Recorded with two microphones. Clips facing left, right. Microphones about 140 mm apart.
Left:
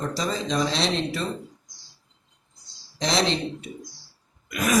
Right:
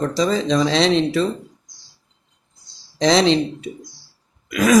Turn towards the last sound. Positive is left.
turn(degrees=-90)